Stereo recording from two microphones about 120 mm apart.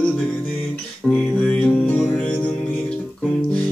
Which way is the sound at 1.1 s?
10° left (ahead or behind).